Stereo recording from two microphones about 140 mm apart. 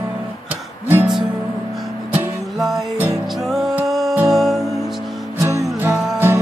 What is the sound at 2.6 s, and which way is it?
Music, 5° right (ahead or behind).